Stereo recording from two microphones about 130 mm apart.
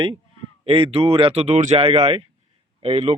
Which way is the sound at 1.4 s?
65° right (ahead or behind).